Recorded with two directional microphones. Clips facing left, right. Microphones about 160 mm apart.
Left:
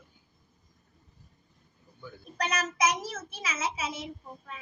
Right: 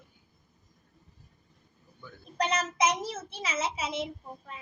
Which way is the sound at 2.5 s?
25° right (ahead or behind).